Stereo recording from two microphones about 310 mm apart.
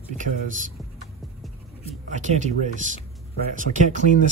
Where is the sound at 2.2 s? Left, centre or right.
Right.